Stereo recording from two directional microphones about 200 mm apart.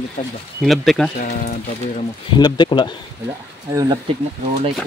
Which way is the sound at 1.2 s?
40° left (ahead or behind).